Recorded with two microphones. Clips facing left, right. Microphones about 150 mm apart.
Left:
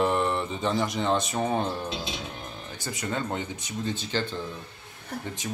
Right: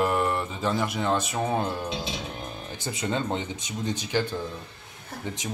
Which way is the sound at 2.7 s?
20° right (ahead or behind).